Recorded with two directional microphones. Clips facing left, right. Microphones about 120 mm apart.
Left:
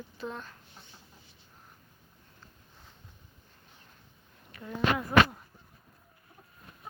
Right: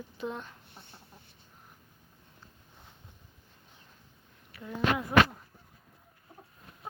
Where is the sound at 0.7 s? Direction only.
60° right (ahead or behind).